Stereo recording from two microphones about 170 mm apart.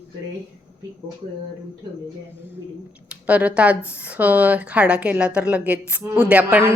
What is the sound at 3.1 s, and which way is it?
Speech, 10° right (ahead or behind).